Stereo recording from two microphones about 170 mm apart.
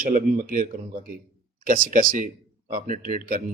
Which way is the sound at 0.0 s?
50° right (ahead or behind).